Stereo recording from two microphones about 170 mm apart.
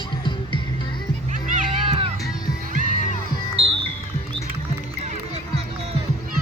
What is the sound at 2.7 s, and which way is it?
Crowd, 55° right (ahead or behind).